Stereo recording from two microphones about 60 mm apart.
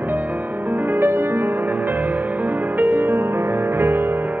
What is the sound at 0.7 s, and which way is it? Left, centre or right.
Music, right.